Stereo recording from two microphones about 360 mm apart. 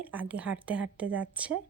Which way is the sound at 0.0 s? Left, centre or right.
Centre.